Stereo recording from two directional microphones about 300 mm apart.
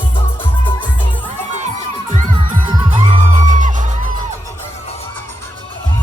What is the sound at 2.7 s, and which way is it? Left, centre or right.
Music, centre.